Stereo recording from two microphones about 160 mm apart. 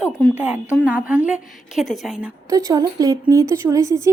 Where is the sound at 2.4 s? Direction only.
20° right (ahead or behind).